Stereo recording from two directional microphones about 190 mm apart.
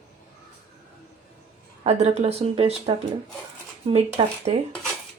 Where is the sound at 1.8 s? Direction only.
35° right (ahead or behind).